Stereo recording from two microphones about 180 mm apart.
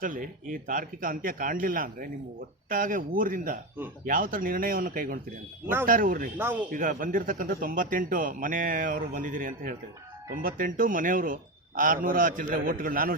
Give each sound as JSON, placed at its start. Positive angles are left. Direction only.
{"t": 0.0, "sound": "speech", "side_deg": -50}
{"t": 6.3, "sound": "speech", "side_deg": -10}
{"t": 6.7, "sound": "speech", "side_deg": -50}